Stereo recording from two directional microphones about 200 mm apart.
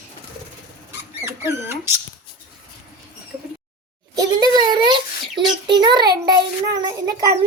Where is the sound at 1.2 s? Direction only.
15° right (ahead or behind).